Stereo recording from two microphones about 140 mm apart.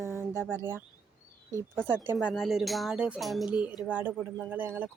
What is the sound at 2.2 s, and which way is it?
Speech, 5° right (ahead or behind).